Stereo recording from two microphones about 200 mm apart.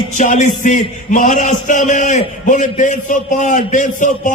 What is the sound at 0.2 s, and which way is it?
A man's voice, 40° left (ahead or behind).